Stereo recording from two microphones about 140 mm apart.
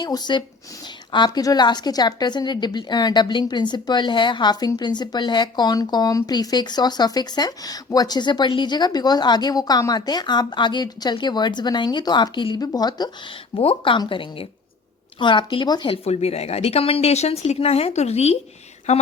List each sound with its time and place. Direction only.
0.0 s a woman's voice: 30° left (ahead or behind)
13.6 s a woman's voice: 40° left (ahead or behind)
16.0 s speech: 50° left (ahead or behind)